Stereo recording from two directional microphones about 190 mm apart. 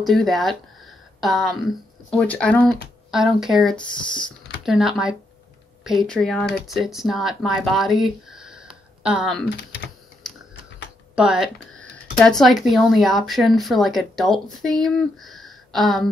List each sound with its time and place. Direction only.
0.0 s speech: centre (ahead or behind)
9.6 s speech: 65° left (ahead or behind)
11.1 s speech: 5° right (ahead or behind)